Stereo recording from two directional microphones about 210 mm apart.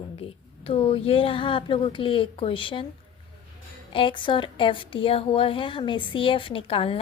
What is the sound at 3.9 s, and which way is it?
A woman's voice, 25° left (ahead or behind).